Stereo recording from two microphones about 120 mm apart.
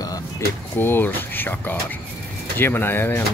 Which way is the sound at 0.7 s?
15° left (ahead or behind).